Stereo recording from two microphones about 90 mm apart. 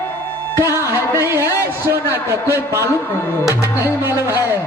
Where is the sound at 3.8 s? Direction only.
25° right (ahead or behind).